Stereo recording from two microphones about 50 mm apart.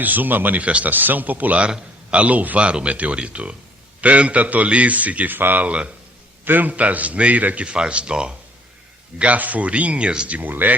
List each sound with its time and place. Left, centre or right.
0.0 s a man's voice: right
5.6 s a man's voice: right
6.4 s a man's voice: right; by 10.3 s centre
10.3 s a man's voice: right